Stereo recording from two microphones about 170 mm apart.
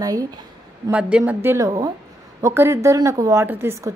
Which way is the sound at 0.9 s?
10° right (ahead or behind).